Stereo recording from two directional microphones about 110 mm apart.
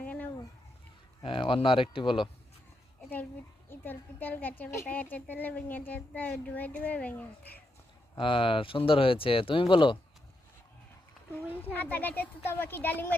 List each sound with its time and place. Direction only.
0.0 s a sound: 15° left (ahead or behind)
1.2 s speech: 50° left (ahead or behind)
3.7 s a woman's voice: 15° left (ahead or behind)
8.1 s speech: 50° left (ahead or behind)
11.7 s a woman's voice: 15° left (ahead or behind)